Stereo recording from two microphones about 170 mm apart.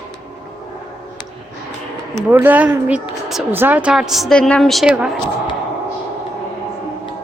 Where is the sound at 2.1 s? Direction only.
10° right (ahead or behind).